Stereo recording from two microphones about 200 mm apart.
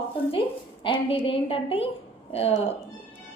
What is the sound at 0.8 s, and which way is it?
A woman's voice, 25° left (ahead or behind).